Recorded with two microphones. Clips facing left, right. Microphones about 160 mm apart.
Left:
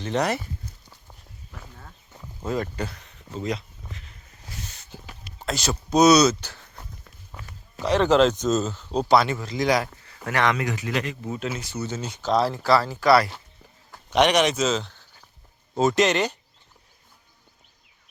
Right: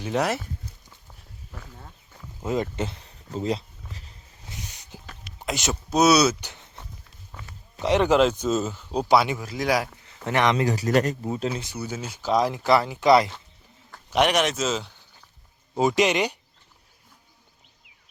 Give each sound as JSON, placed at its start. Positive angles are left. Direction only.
{"t": 0.0, "sound": "speech", "side_deg": -5}
{"t": 2.4, "sound": "speech", "side_deg": -20}
{"t": 4.4, "sound": "a sound", "side_deg": -15}
{"t": 5.4, "sound": "speech", "side_deg": -15}
{"t": 5.9, "sound": "speech", "side_deg": -5}
{"t": 7.8, "sound": "speech", "side_deg": -20}
{"t": 10.2, "sound": "speech", "side_deg": -20}
{"t": 11.6, "sound": "speech", "side_deg": -10}
{"t": 14.1, "sound": "speech", "side_deg": -5}